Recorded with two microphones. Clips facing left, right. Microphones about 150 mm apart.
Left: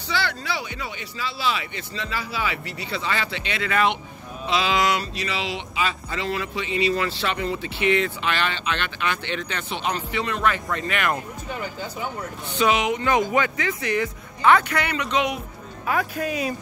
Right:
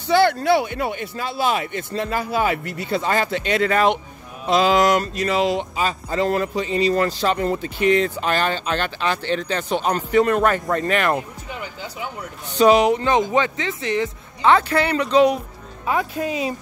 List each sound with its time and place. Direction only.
0.1 s speech: 50° right (ahead or behind)
12.5 s speech: 40° right (ahead or behind)
15.9 s speech: 20° right (ahead or behind)